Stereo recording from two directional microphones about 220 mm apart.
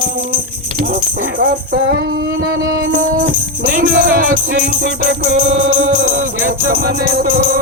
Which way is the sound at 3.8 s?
40° right (ahead or behind).